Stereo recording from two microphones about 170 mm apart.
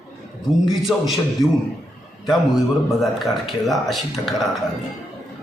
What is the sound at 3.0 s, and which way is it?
A man's voice, centre (ahead or behind).